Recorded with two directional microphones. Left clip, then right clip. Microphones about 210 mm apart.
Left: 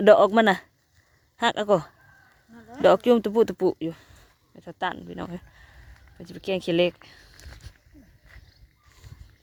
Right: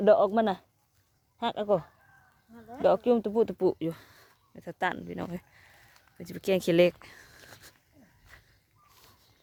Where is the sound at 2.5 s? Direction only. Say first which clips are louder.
Left 1 dB; 35° left (ahead or behind).